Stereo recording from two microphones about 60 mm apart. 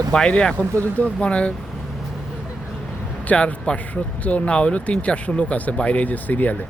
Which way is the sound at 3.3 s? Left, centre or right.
Left.